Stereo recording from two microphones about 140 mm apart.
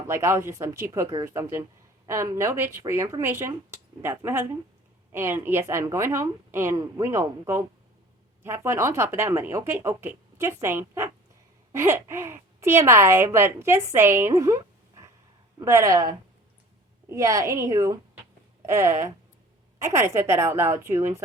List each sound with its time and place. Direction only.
0.1 s speech: 20° right (ahead or behind)